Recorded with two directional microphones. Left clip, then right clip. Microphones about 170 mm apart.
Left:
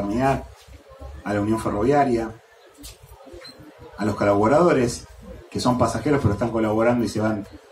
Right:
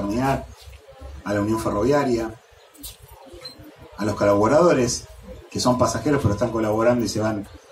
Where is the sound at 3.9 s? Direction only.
15° left (ahead or behind).